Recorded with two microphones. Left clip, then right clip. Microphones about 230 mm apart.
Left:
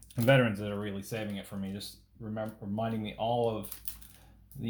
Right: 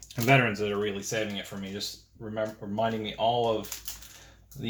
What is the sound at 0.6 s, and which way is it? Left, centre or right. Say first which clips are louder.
Speech: right 8 dB; left.